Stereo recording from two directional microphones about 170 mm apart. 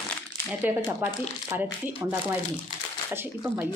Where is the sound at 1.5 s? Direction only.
10° right (ahead or behind).